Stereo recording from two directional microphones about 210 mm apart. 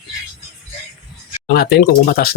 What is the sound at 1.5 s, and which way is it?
Speech, 50° left (ahead or behind).